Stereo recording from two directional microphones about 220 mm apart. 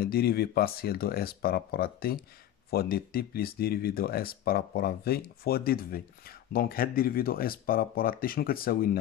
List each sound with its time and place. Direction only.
0.0 s speech: 45° left (ahead or behind)